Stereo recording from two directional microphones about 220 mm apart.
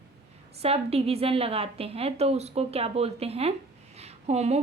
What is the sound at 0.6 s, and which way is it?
A woman's voice, 25° right (ahead or behind).